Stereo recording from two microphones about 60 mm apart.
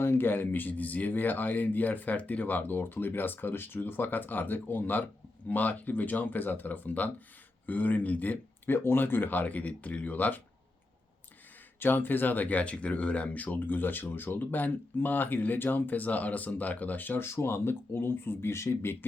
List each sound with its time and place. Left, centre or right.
0.0 s speech: left
11.8 s speech: left
17.2 s speech: left